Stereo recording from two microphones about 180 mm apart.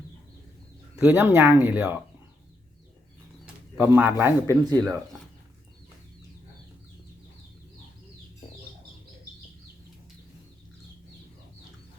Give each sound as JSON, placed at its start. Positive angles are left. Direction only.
{"t": 1.0, "sound": "speech", "side_deg": -10}
{"t": 3.4, "sound": "bird", "side_deg": -10}
{"t": 4.4, "sound": "speech", "side_deg": -20}